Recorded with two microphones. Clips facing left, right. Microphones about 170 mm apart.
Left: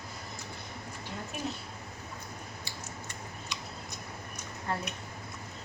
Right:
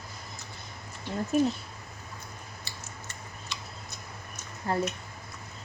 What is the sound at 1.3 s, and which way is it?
Speech, 40° right (ahead or behind).